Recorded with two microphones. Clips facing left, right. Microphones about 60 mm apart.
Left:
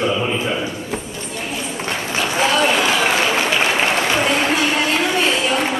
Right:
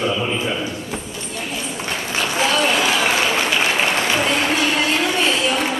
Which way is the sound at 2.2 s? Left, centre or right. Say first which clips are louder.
Left 2 dB; centre.